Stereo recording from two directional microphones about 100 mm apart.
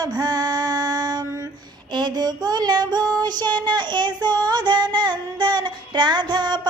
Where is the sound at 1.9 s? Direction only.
45° right (ahead or behind).